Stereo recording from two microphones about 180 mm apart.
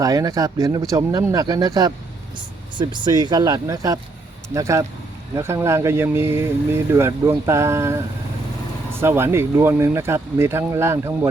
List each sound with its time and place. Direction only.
0.0 s speech: 20° right (ahead or behind)